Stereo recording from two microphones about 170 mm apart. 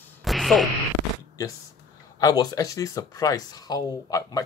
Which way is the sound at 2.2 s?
25° left (ahead or behind).